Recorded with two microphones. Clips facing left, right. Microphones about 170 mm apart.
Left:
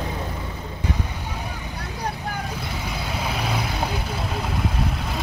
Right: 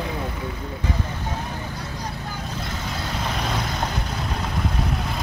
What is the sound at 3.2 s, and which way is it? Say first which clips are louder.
Vehicle: even; 5° left (ahead or behind).